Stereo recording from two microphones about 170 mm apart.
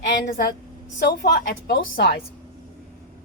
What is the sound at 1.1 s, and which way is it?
Speech, 70° left (ahead or behind).